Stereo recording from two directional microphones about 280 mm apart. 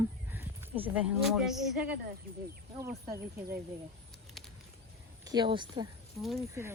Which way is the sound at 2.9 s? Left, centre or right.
Right.